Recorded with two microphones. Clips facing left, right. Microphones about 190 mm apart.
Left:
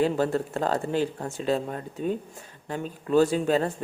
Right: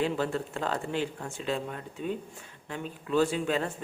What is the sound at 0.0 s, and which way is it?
Speech, 40° left (ahead or behind).